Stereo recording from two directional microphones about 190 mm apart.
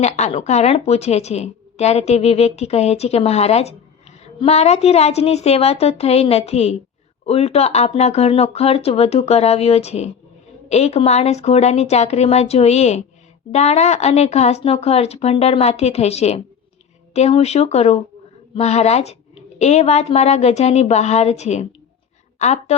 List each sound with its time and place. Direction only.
0.0 s a woman's voice: 35° left (ahead or behind)